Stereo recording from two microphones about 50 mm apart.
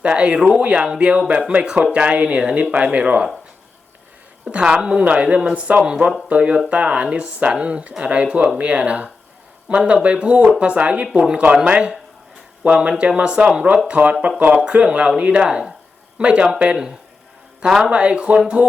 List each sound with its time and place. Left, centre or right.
0.0 s speech: right
4.5 s speech: centre
5.5 s speech: right
17.7 s speech: centre
17.9 s speech: right